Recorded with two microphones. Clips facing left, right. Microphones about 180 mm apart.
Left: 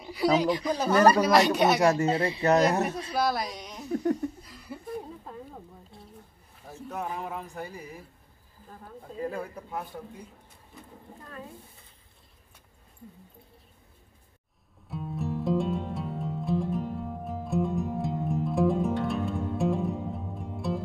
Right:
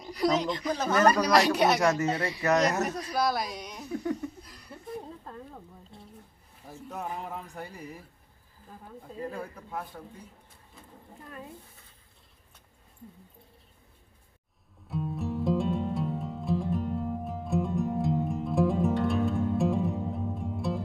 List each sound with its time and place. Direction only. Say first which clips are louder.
0.0 s a sound: even; 5° left (ahead or behind)
0.4 s speech: left 3 dB; 10° left (ahead or behind)
0.9 s speech: left 3 dB; 30° left (ahead or behind)
1.2 s speech: left 1 dB; centre (ahead or behind)
1.8 s speech: left 3 dB; 30° left (ahead or behind)
3.2 s speech: left 1 dB; centre (ahead or behind)
4.4 s a sound: left 5 dB; centre (ahead or behind)
5.2 s speech: left 1 dB; 10° left (ahead or behind)
9.2 s speech: left 4 dB; 5° left (ahead or behind)
14.9 s music: right 1 dB; centre (ahead or behind)